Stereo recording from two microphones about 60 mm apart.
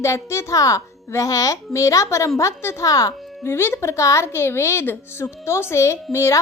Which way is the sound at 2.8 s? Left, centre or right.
Left.